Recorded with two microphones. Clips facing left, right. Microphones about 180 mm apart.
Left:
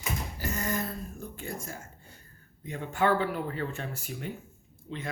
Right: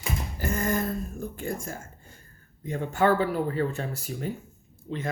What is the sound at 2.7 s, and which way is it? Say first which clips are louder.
Speech: right 4 dB; 45° right (ahead or behind).